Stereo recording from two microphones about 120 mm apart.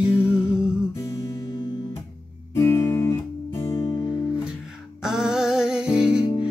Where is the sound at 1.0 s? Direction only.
30° left (ahead or behind).